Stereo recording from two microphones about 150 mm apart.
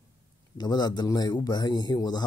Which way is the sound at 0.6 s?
30° left (ahead or behind).